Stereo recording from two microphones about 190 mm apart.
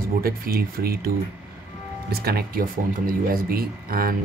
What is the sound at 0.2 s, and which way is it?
Speech, 50° right (ahead or behind).